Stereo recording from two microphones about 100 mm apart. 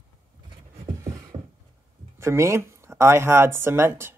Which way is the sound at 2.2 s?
30° right (ahead or behind).